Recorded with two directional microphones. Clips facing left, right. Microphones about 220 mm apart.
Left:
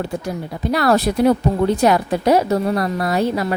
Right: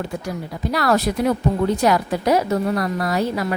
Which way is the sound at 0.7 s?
30° left (ahead or behind).